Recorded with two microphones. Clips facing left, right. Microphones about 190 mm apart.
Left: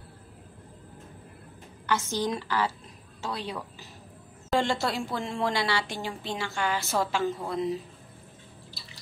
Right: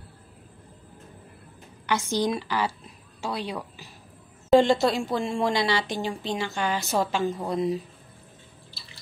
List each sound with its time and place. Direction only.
1.9 s a woman's voice: 15° right (ahead or behind)